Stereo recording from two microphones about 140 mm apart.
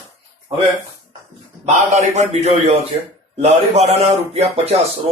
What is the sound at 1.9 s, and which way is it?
A man's voice, 55° right (ahead or behind).